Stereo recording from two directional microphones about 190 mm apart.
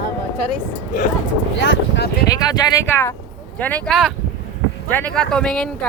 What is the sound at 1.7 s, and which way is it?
Speech, 65° left (ahead or behind).